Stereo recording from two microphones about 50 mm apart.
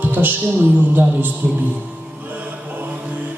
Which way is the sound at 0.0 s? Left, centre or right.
Right.